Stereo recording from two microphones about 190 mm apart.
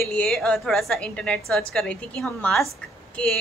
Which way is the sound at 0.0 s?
5° left (ahead or behind).